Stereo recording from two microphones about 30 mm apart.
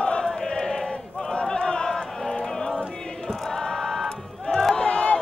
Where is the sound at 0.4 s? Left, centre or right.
Left.